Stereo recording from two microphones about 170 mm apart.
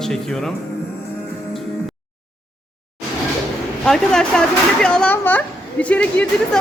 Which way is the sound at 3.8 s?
5° left (ahead or behind).